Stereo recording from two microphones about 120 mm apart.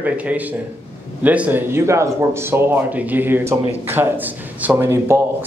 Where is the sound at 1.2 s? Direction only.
15° right (ahead or behind).